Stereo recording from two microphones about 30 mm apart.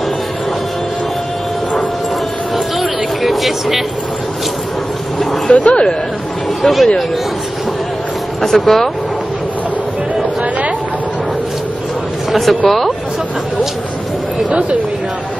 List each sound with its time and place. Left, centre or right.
2.5 s a sound: centre
5.5 s speech: left
6.6 s speech: centre
8.4 s speech: centre
12.3 s speech: centre
14.5 s speech: right